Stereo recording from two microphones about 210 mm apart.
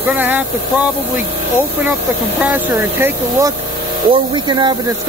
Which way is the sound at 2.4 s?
10° right (ahead or behind).